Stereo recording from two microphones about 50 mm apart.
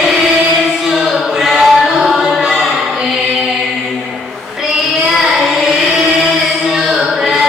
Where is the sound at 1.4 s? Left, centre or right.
Centre.